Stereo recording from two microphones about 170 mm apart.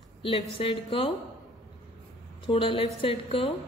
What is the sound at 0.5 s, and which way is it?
Speech, 30° left (ahead or behind).